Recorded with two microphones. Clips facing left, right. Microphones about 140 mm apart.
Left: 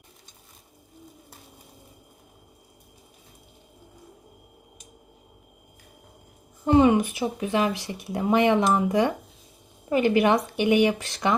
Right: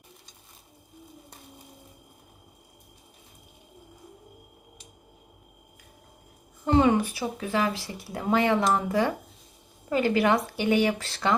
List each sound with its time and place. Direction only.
6.7 s speech: 20° left (ahead or behind)